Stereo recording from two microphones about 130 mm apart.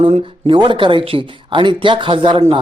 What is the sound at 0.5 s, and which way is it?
Speech, 40° right (ahead or behind).